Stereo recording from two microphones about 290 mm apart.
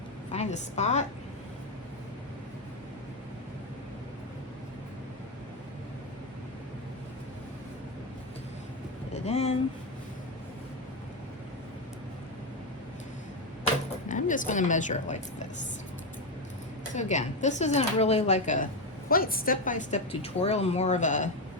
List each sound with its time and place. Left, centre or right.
0.3 s a woman's voice: left
9.1 s a sound: left
14.1 s a woman's voice: left
16.9 s speech: left